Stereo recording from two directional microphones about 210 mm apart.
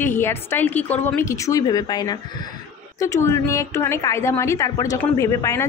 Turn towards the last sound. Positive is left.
turn(degrees=15)  # may be behind; listen again after turning